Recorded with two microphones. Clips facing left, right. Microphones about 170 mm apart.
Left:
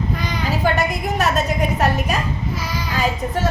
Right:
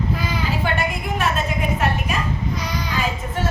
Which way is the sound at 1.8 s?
40° left (ahead or behind).